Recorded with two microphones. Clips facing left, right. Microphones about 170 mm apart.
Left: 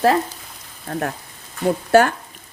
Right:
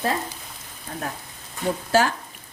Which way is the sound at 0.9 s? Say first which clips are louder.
Left 7 dB; 65° left (ahead or behind).